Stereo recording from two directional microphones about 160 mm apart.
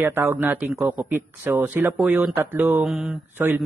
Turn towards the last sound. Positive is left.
turn(degrees=-10)  # may be behind; listen again after turning